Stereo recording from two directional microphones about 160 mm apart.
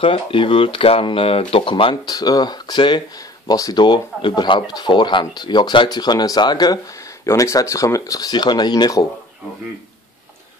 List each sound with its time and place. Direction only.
0.0 s speech: 35° left (ahead or behind)